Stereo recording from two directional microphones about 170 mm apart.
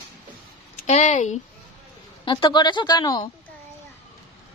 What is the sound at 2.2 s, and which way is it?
Speech, 30° left (ahead or behind).